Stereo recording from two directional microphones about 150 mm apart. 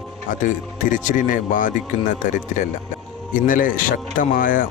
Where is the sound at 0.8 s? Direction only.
60° left (ahead or behind).